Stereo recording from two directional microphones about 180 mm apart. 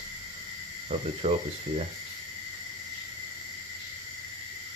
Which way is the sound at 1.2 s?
35° right (ahead or behind).